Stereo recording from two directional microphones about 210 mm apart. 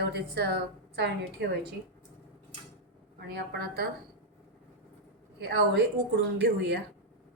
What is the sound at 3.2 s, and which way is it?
Speech, 50° right (ahead or behind).